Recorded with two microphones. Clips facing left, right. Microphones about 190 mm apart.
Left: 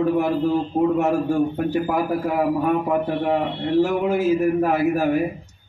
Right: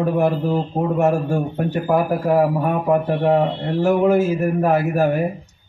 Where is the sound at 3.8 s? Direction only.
45° right (ahead or behind).